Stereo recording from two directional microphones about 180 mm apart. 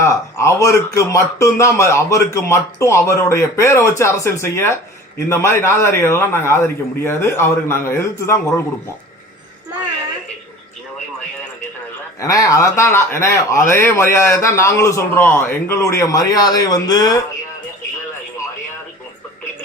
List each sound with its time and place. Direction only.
0.0 s speech: 15° left (ahead or behind)
12.2 s speech: 20° left (ahead or behind)